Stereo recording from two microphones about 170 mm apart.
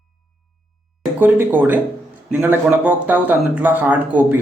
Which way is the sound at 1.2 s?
10° right (ahead or behind).